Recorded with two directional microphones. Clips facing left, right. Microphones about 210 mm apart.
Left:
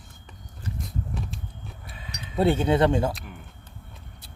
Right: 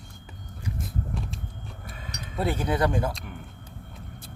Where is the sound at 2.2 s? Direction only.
30° left (ahead or behind).